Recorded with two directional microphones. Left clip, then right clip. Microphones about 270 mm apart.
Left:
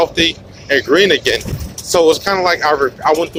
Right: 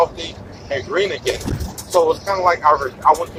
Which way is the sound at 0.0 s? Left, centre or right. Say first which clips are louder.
Left 5 dB; left.